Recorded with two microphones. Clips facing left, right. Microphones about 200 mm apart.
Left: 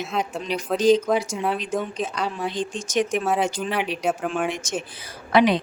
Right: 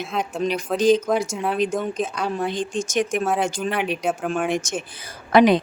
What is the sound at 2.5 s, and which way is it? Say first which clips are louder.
Speech: right 3 dB; 50° right (ahead or behind).